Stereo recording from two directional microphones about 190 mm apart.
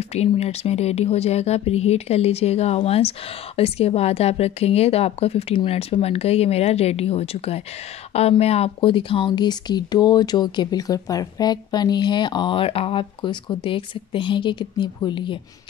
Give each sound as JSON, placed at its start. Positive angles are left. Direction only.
{"t": 0.1, "sound": "speech", "side_deg": 35}